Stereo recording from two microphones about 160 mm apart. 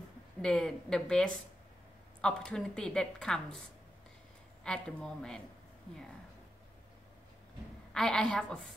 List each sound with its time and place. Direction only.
0.4 s a woman's voice: 5° left (ahead or behind)
4.6 s a woman's voice: 5° left (ahead or behind)
7.9 s a woman's voice: 5° left (ahead or behind)